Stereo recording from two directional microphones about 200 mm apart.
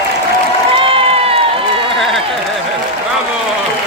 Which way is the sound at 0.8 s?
25° right (ahead or behind).